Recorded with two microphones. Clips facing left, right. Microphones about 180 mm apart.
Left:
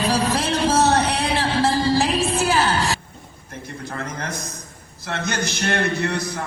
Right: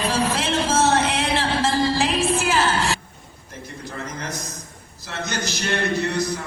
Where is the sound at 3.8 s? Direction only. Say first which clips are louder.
Left 2 dB; 60° left (ahead or behind).